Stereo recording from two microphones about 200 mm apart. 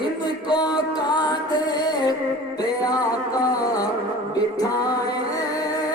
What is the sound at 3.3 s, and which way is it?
Music, 20° left (ahead or behind).